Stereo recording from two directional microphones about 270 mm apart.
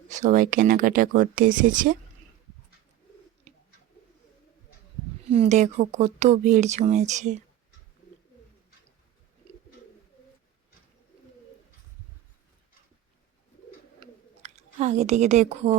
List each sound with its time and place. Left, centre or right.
0.1 s speech: right
3.5 s bird: right
5.3 s speech: right
14.0 s a sound: right